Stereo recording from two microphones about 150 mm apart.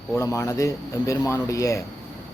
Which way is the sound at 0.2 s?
20° left (ahead or behind).